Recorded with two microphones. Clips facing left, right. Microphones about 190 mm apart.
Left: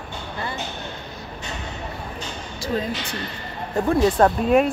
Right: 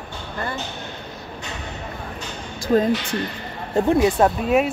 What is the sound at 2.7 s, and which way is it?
Speech, 50° right (ahead or behind).